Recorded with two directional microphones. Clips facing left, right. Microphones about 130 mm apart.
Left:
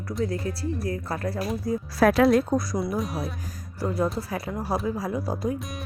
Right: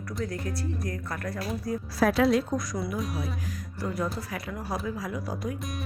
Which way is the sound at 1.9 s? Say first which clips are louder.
Left 4 dB; 60° left (ahead or behind).